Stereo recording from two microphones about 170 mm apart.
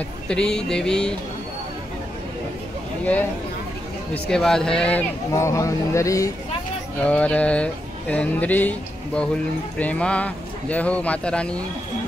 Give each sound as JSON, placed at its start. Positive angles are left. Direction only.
{"t": 0.3, "sound": "speech", "side_deg": 5}
{"t": 4.1, "sound": "speech", "side_deg": 5}
{"t": 5.3, "sound": "speech", "side_deg": 20}
{"t": 7.1, "sound": "speech", "side_deg": 5}